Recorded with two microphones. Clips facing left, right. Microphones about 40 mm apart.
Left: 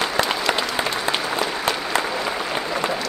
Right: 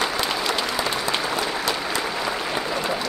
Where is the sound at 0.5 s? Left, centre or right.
Centre.